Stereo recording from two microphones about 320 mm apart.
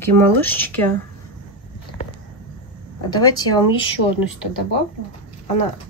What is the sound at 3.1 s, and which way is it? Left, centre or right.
Speech, centre.